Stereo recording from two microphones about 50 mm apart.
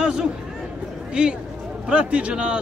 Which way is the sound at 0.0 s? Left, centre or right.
Centre.